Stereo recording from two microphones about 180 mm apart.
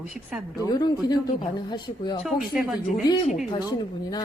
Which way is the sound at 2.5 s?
5° right (ahead or behind).